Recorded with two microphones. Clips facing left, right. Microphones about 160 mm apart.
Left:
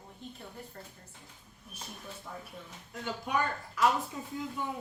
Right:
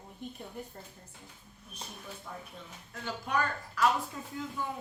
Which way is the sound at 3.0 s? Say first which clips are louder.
Even; 15° left (ahead or behind).